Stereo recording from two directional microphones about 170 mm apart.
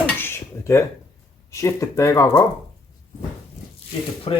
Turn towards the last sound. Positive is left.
turn(degrees=35)  # may be behind; listen again after turning